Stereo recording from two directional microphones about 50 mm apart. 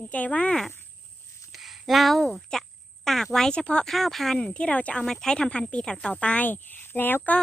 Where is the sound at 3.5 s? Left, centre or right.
Left.